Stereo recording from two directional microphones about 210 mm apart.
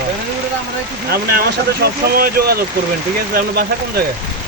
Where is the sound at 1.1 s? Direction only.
45° right (ahead or behind).